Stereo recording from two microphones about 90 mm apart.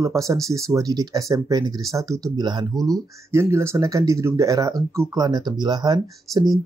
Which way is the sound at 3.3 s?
30° right (ahead or behind).